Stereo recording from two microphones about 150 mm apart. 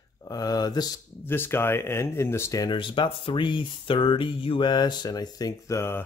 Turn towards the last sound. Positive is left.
turn(degrees=15)  # may be behind; listen again after turning